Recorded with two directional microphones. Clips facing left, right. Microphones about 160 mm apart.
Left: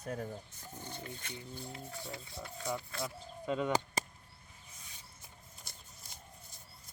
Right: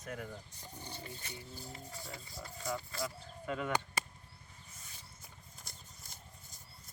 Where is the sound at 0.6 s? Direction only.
10° right (ahead or behind).